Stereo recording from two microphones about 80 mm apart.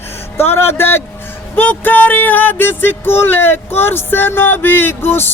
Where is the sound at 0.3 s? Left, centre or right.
Left.